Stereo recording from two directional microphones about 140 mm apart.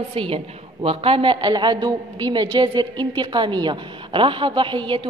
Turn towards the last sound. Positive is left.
turn(degrees=-35)  # may be behind; listen again after turning